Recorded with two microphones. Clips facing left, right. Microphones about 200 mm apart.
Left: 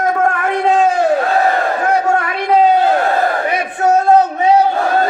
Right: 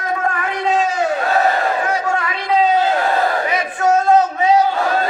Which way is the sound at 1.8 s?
60° left (ahead or behind).